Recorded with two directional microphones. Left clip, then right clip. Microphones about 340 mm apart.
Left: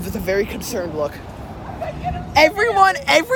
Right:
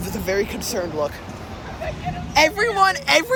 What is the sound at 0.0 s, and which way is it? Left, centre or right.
Speech, centre.